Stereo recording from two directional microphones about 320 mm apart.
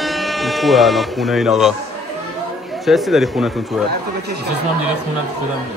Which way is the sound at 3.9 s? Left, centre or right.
Right.